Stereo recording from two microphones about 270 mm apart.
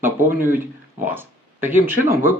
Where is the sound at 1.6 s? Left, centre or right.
Centre.